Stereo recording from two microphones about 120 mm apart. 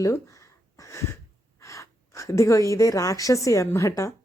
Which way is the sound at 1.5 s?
25° left (ahead or behind).